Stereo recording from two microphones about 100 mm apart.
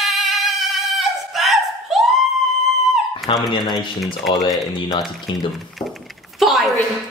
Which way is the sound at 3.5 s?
45° left (ahead or behind).